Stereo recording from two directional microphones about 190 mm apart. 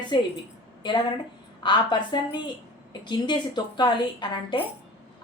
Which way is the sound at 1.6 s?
25° left (ahead or behind).